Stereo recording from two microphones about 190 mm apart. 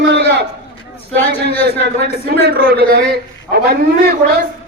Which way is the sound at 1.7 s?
60° right (ahead or behind).